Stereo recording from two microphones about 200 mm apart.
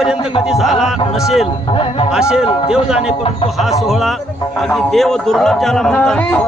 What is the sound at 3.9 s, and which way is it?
A man's voice, centre (ahead or behind).